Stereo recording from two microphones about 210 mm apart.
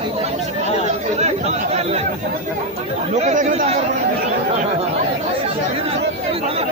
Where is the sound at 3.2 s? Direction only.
35° right (ahead or behind).